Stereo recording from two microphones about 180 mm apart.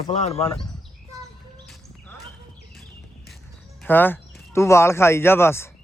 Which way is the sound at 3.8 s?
10° left (ahead or behind).